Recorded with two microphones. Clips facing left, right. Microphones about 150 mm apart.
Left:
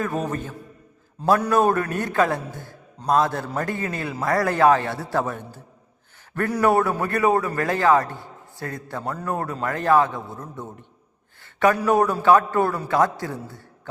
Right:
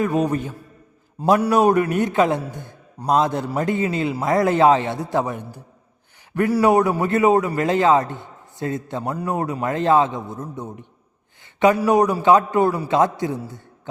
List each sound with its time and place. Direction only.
0.0 s a man's voice: 15° right (ahead or behind)